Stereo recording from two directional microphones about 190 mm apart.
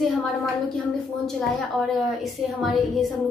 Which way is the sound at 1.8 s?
Centre (ahead or behind).